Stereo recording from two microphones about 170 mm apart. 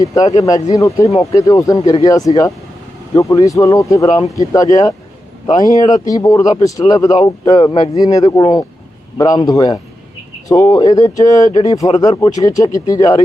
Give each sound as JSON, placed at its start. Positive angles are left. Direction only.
{"t": 0.0, "sound": "speech", "side_deg": 20}